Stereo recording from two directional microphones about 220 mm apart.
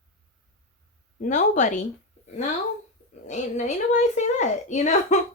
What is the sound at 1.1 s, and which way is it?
Speech, 35° left (ahead or behind).